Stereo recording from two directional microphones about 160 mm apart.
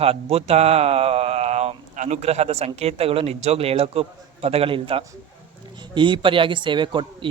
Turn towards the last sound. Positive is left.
turn(degrees=-30)  # may be behind; listen again after turning